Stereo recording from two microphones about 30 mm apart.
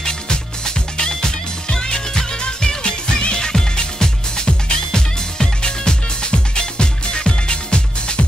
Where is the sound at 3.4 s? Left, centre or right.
Left.